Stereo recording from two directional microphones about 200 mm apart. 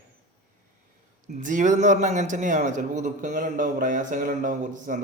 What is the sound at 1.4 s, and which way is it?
A man's voice, 40° right (ahead or behind).